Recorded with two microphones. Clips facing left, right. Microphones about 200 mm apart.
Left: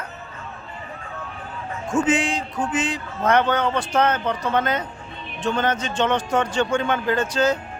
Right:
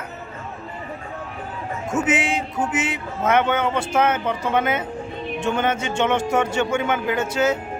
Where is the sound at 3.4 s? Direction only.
10° right (ahead or behind).